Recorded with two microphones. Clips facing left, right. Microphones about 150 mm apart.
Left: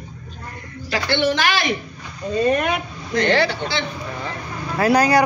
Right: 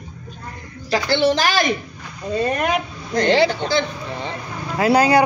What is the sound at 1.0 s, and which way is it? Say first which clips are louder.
Speech: right 1 dB; 35° right (ahead or behind).